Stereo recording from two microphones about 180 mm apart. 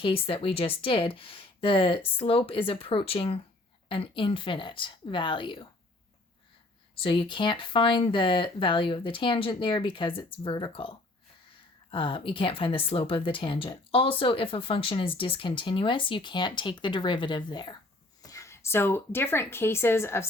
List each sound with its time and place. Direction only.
0.0 s a woman's voice: 30° left (ahead or behind)
6.9 s a woman's voice: 30° left (ahead or behind); by 20.2 s 15° left (ahead or behind)